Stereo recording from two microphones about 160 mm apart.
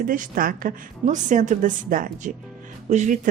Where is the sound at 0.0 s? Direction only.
60° right (ahead or behind).